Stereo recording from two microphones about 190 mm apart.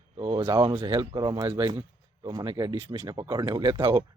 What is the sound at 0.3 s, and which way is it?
Speech, 20° right (ahead or behind).